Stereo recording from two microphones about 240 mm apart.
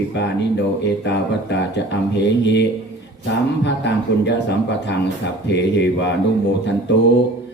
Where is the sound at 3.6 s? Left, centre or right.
Left.